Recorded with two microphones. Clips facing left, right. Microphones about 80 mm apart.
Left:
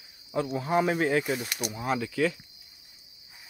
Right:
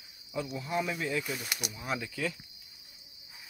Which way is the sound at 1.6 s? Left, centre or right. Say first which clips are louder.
Left 6 dB; left.